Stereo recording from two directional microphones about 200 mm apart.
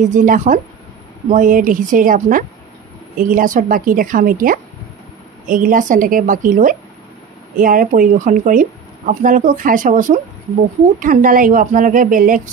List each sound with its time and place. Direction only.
0.0 s a woman's voice: 40° right (ahead or behind)